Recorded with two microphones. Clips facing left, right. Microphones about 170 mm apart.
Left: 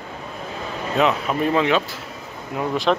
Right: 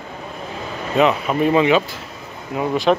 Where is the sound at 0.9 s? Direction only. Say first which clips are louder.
Right 3 dB; centre (ahead or behind).